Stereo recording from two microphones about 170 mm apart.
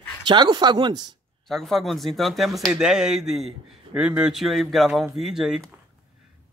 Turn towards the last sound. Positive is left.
turn(degrees=-5)  # may be behind; listen again after turning